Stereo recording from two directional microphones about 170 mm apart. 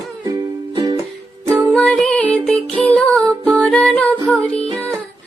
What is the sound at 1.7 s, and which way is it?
Music, 5° left (ahead or behind).